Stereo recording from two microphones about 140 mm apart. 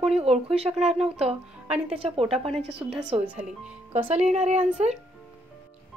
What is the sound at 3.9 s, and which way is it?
Speech, 50° right (ahead or behind).